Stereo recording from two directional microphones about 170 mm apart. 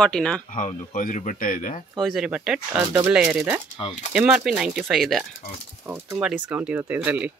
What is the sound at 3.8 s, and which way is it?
Speech, 35° left (ahead or behind).